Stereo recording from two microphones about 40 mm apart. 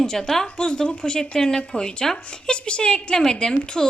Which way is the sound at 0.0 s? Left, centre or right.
Centre.